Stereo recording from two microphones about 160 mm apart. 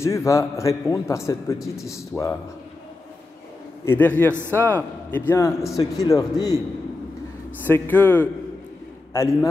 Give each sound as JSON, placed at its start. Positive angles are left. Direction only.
{"t": 0.0, "sound": "a man's voice", "side_deg": 20}
{"t": 3.8, "sound": "a man's voice", "side_deg": 10}
{"t": 4.3, "sound": "a man's voice", "side_deg": -15}
{"t": 4.6, "sound": "a man's voice", "side_deg": 10}
{"t": 7.6, "sound": "a man's voice", "side_deg": 10}